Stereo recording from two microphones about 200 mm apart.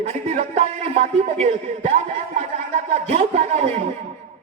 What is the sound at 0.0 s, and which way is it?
A man's voice, 35° right (ahead or behind).